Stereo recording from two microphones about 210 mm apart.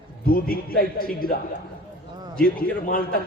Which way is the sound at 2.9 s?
45° left (ahead or behind).